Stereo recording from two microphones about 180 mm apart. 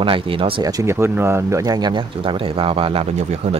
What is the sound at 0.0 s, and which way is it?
Speech, 30° right (ahead or behind).